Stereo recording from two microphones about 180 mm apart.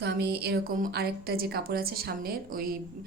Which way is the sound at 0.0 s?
65° right (ahead or behind).